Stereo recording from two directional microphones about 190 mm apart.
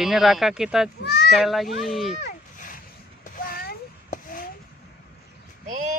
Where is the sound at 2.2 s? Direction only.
45° left (ahead or behind).